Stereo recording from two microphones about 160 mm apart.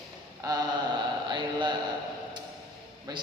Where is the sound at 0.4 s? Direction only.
20° right (ahead or behind).